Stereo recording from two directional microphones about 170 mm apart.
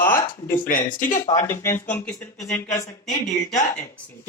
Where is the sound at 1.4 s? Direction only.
15° left (ahead or behind).